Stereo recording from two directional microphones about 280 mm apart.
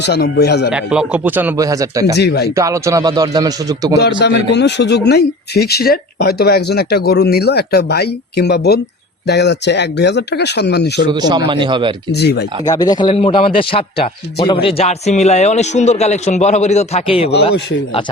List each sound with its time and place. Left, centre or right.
0.0 s speech: left
0.7 s a man's voice: centre
2.1 s speech: left
2.6 s a man's voice: centre
4.2 s speech: left
11.0 s a man's voice: centre
12.1 s speech: left
12.6 s a man's voice: centre